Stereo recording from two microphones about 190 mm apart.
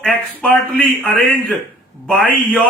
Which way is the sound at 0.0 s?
5° left (ahead or behind).